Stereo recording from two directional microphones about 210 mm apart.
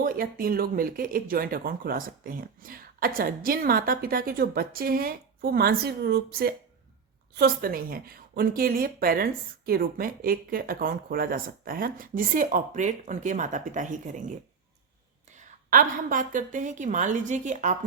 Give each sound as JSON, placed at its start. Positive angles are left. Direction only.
{"t": 0.0, "sound": "a woman's voice", "side_deg": -45}
{"t": 15.7, "sound": "a woman's voice", "side_deg": -40}